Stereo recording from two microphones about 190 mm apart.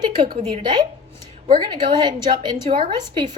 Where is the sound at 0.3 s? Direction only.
25° right (ahead or behind).